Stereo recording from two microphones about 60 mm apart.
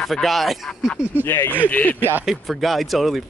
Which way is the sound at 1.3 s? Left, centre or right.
Left.